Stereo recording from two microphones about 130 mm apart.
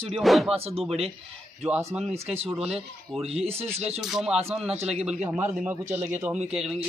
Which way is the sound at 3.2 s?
50° right (ahead or behind).